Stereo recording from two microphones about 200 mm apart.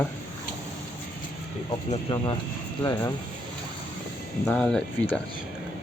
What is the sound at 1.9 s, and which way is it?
Speech, 25° left (ahead or behind).